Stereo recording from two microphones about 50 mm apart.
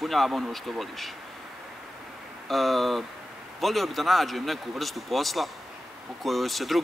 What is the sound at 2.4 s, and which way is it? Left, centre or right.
Speech, centre.